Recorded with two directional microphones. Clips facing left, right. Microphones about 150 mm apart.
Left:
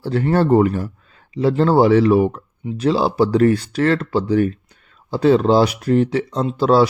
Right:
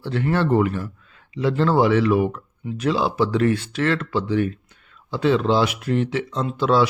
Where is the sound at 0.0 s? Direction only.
40° left (ahead or behind).